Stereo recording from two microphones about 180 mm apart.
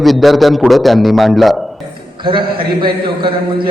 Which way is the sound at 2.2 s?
25° right (ahead or behind).